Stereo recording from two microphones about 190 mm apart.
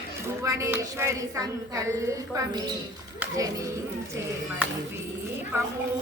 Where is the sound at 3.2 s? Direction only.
15° right (ahead or behind).